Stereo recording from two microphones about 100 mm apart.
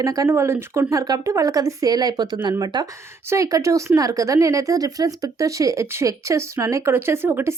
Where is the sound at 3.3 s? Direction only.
35° right (ahead or behind).